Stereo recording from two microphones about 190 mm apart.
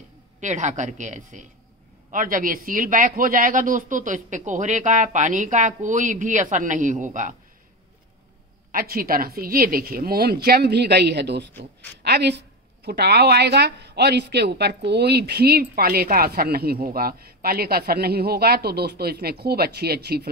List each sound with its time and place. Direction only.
0.4 s a woman's voice: 40° right (ahead or behind)
8.7 s a woman's voice: 50° right (ahead or behind)